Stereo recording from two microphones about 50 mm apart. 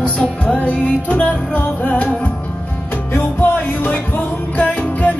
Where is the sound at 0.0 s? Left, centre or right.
Left.